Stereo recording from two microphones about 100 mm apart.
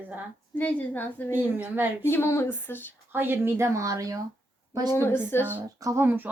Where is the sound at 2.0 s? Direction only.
25° left (ahead or behind).